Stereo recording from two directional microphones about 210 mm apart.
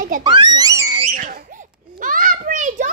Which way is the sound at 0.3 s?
20° right (ahead or behind).